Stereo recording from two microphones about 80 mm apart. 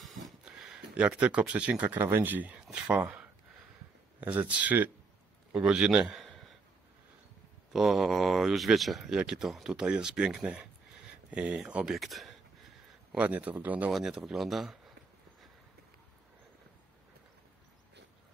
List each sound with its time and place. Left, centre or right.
0.0 s a sound: centre
0.9 s a man's voice: centre
6.1 s a sound: centre
7.7 s speech: centre
13.1 s speech: centre
13.9 s speech: centre